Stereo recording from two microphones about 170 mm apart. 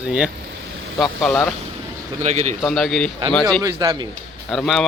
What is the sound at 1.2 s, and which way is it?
Speech, 10° left (ahead or behind).